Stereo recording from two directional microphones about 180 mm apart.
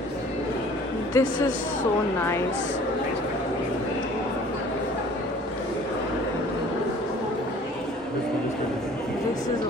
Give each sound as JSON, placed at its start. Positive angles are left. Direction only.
{"t": 1.1, "sound": "a man's voice", "side_deg": 15}